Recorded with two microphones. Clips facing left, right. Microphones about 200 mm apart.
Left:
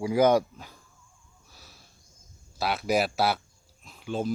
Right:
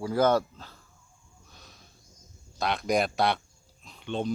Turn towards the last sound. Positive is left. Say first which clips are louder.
# left 1 dB
turn(degrees=5)  # may be behind; listen again after turning